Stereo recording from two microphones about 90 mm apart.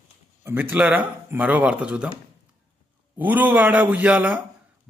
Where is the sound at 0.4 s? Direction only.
20° right (ahead or behind).